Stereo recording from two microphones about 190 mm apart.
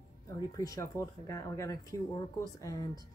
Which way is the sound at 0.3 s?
20° left (ahead or behind).